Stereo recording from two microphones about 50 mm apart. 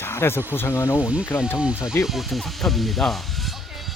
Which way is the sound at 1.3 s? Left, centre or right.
Left.